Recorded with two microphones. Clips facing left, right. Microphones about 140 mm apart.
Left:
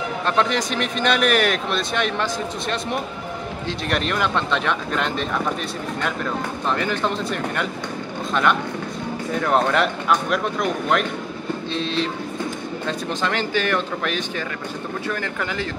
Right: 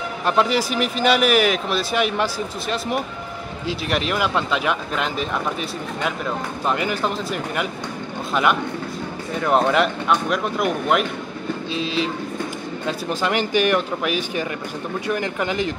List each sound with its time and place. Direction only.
0.3 s speech: 5° right (ahead or behind)
3.6 s speech: 5° right (ahead or behind)
6.7 s speech: 10° right (ahead or behind)
9.4 s speech: 5° right (ahead or behind)